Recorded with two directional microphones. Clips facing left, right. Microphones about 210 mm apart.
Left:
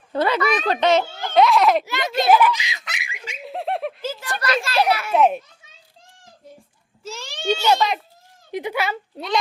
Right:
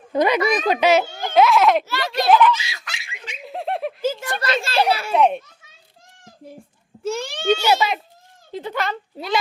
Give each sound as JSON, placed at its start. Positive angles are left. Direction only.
{"t": 0.1, "sound": "a child's voice", "side_deg": -15}
{"t": 1.8, "sound": "a child's voice", "side_deg": 20}
{"t": 2.3, "sound": "giggle", "side_deg": 10}
{"t": 4.4, "sound": "a child's voice", "side_deg": -25}
{"t": 5.1, "sound": "a child's voice", "side_deg": 0}
{"t": 7.0, "sound": "a child's voice", "side_deg": -55}
{"t": 7.5, "sound": "a child's voice", "side_deg": -10}
{"t": 8.5, "sound": "a child's voice", "side_deg": 10}
{"t": 9.1, "sound": "a child's voice", "side_deg": -5}